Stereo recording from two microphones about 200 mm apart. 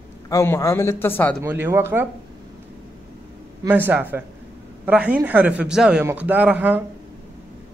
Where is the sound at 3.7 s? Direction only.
10° right (ahead or behind).